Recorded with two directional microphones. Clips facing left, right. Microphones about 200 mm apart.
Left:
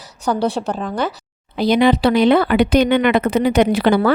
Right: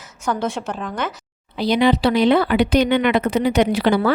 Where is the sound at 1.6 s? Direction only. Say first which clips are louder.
Left 3 dB; 50° left (ahead or behind).